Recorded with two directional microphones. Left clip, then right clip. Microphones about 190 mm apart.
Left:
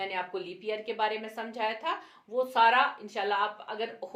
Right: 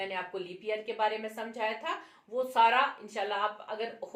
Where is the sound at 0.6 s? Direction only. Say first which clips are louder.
Even; 35° left (ahead or behind).